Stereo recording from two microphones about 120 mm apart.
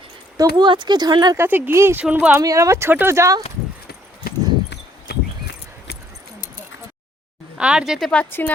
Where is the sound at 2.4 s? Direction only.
25° right (ahead or behind).